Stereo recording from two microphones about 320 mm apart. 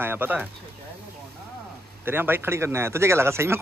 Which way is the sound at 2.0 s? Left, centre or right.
Centre.